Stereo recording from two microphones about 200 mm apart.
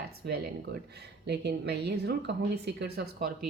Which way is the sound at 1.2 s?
55° right (ahead or behind).